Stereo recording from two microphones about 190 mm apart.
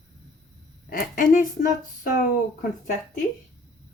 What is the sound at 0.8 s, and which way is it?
Speech, 50° left (ahead or behind).